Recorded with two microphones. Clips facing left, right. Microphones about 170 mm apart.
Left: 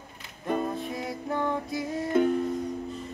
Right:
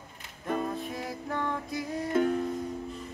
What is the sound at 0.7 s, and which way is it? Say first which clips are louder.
Music: left 2 dB; centre (ahead or behind).